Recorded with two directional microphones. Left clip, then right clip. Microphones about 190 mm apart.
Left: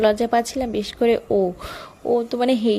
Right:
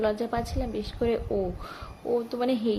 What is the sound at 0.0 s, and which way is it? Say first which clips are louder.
A woman's voice: left 10 dB; 50° left (ahead or behind).